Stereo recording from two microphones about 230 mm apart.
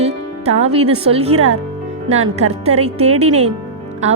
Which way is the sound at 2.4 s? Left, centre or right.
Right.